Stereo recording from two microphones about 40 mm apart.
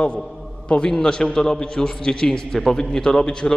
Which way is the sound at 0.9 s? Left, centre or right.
Centre.